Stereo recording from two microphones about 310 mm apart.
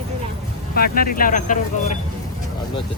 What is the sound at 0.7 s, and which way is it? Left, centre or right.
Speech, left.